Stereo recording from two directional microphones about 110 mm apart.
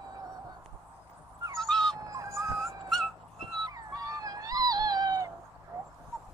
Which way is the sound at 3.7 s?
35° right (ahead or behind).